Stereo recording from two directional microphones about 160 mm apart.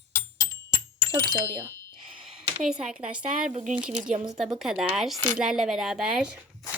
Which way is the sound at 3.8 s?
50° right (ahead or behind).